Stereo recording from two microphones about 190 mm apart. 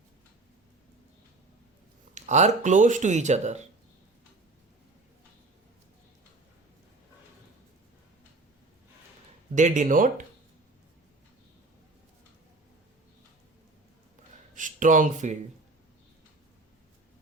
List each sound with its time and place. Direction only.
2.1 s speech: 40° right (ahead or behind)
9.6 s speech: 40° right (ahead or behind)
14.5 s speech: 40° right (ahead or behind)